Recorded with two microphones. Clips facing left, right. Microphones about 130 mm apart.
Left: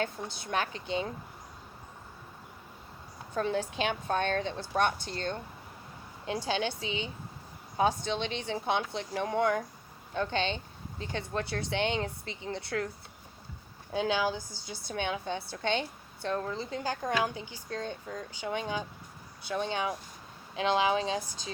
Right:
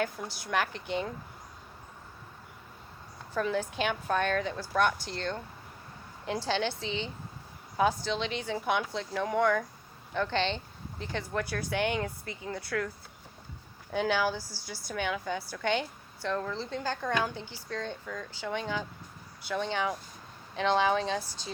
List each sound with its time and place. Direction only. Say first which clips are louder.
0.3 s a woman's voice: right 1 dB; 20° left (ahead or behind)
3.3 s a woman's voice: even; 30° left (ahead or behind); by 7.1 s 15° left (ahead or behind)
7.8 s a woman's voice: even; 25° left (ahead or behind)
13.9 s a woman's voice: right 1 dB; 20° left (ahead or behind)
18.0 s a woman's voice: even; 30° left (ahead or behind)
18.3 s speech: even; 15° left (ahead or behind)